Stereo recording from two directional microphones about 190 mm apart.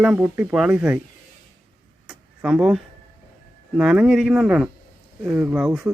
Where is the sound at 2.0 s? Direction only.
5° right (ahead or behind).